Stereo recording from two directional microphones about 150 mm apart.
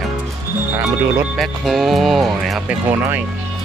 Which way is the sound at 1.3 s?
Centre (ahead or behind).